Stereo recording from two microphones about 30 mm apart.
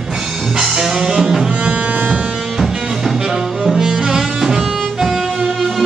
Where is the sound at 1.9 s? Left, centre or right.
Right.